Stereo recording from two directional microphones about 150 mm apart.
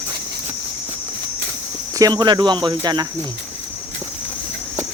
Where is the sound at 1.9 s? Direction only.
25° right (ahead or behind).